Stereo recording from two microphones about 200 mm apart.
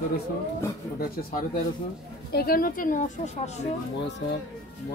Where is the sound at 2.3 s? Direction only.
50° left (ahead or behind).